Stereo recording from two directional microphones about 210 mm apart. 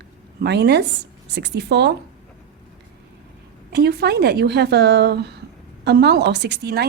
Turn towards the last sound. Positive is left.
turn(degrees=-50)  # may be behind; listen again after turning